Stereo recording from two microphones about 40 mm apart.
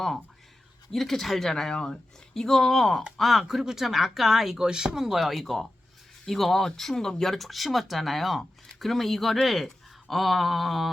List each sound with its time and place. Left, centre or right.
0.9 s a woman's voice: centre
4.5 s speech: centre